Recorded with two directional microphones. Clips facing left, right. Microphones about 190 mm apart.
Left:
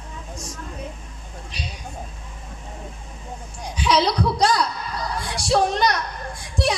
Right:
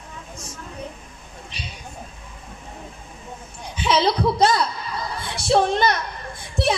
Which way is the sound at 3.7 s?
25° right (ahead or behind).